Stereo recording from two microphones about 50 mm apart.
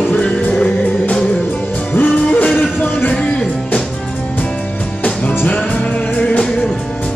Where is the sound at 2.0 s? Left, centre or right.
Left; by 3.8 s centre.